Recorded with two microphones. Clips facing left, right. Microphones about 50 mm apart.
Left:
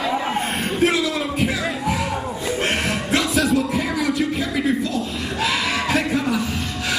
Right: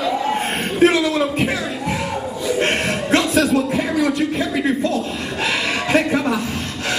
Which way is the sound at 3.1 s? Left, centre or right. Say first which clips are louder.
Right 4 dB; right.